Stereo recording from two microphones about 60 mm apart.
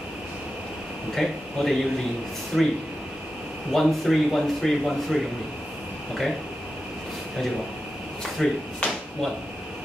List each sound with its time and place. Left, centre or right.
1.1 s speech: centre
3.7 s speech: centre
8.4 s a sound: centre